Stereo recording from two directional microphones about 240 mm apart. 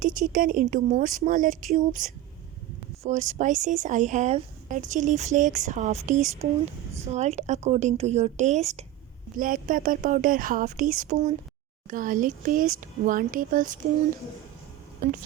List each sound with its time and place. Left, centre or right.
0.0 s a woman's voice: right